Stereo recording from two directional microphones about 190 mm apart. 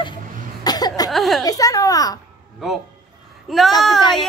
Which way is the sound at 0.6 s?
20° left (ahead or behind).